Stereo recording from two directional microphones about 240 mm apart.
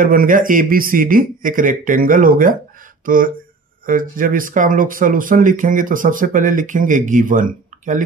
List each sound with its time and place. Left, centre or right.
0.0 s speech: right